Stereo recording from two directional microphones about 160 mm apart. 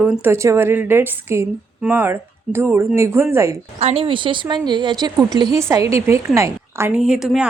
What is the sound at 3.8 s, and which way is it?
A woman's voice, 40° right (ahead or behind).